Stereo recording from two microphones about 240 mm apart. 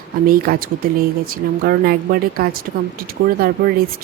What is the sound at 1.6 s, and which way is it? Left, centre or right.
Speech, right.